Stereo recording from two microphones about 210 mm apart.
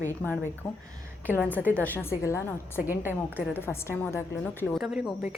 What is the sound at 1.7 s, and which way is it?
Speech, 10° left (ahead or behind).